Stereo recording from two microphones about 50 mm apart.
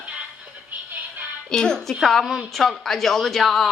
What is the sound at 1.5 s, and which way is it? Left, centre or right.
Speech, centre.